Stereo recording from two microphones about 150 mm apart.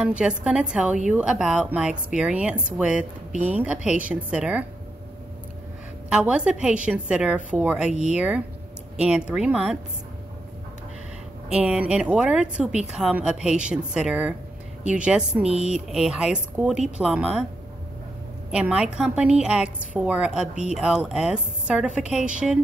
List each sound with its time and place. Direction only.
0.0 s a woman's voice: 5° right (ahead or behind)
6.0 s a woman's voice: 5° right (ahead or behind)
11.4 s a woman's voice: 5° right (ahead or behind)
18.5 s a woman's voice: 5° right (ahead or behind)